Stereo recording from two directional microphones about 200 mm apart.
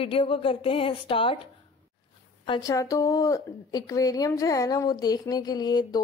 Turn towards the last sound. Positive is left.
turn(degrees=20)  # may be behind; listen again after turning